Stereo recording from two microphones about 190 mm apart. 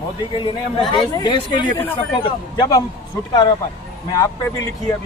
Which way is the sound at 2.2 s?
25° left (ahead or behind).